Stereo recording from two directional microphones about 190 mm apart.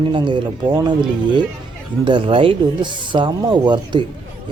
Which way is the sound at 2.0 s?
25° right (ahead or behind).